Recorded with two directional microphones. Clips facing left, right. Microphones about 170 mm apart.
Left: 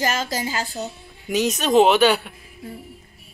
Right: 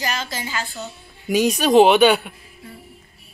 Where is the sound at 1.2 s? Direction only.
10° right (ahead or behind).